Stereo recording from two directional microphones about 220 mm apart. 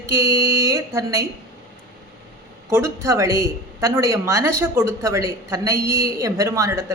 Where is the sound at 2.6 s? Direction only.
10° right (ahead or behind).